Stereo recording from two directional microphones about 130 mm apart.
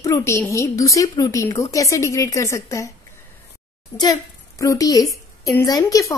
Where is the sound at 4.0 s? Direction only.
25° left (ahead or behind).